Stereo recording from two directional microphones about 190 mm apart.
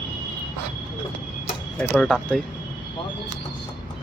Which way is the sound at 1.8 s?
5° left (ahead or behind).